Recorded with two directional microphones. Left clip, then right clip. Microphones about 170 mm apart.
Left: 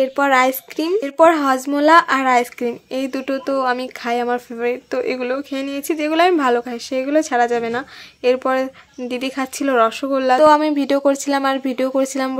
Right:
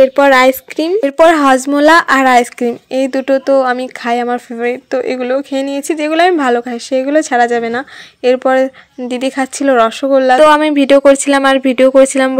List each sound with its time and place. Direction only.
0.0 s speech: 25° right (ahead or behind)